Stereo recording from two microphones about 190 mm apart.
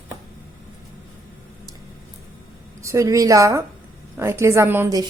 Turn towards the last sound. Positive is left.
turn(degrees=-15)  # may be behind; listen again after turning